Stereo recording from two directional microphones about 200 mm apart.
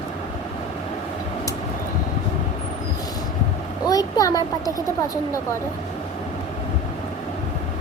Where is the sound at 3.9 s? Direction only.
20° left (ahead or behind).